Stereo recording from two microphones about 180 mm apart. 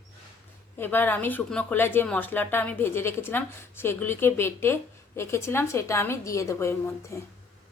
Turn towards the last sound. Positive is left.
turn(degrees=15)  # may be behind; listen again after turning